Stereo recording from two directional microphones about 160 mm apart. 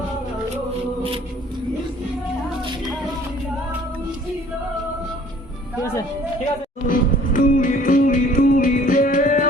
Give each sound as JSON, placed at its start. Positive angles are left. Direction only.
{"t": 6.8, "sound": "music", "side_deg": 55}